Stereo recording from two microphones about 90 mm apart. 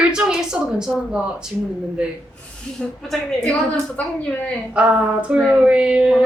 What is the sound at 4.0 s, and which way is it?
Speech, 15° left (ahead or behind).